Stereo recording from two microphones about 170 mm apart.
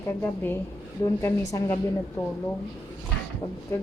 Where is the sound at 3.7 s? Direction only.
20° left (ahead or behind).